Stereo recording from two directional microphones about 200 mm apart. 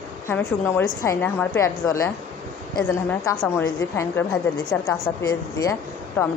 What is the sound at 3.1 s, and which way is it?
A woman's voice, 10° left (ahead or behind).